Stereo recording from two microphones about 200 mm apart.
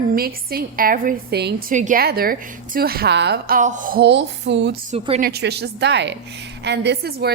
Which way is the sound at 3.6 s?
40° right (ahead or behind).